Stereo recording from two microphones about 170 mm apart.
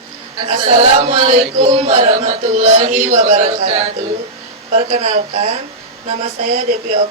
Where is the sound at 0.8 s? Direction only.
45° right (ahead or behind).